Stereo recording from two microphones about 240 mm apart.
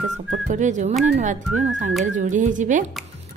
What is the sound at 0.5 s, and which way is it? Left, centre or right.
Speech, right.